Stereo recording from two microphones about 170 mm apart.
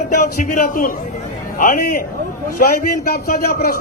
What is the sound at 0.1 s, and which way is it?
A man's voice, 50° left (ahead or behind).